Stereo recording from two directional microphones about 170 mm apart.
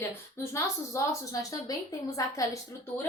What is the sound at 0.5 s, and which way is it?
A woman's voice, 20° left (ahead or behind).